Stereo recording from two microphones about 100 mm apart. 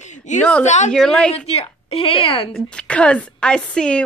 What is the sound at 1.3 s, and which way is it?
Laughter, 90° left.